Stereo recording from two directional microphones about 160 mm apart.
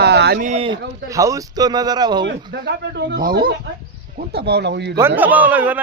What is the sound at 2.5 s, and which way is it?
Speech, 90° right.